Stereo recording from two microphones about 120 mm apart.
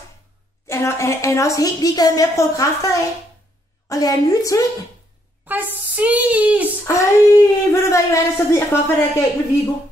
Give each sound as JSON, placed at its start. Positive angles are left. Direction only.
{"t": 0.7, "sound": "a woman's voice", "side_deg": 25}
{"t": 5.5, "sound": "speech", "side_deg": -15}
{"t": 6.9, "sound": "a woman's voice", "side_deg": 25}